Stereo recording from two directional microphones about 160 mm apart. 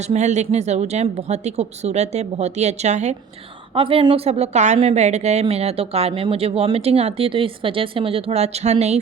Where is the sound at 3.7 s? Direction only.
35° right (ahead or behind).